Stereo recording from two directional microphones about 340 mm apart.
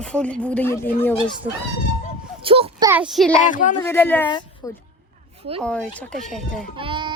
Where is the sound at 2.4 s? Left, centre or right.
Centre.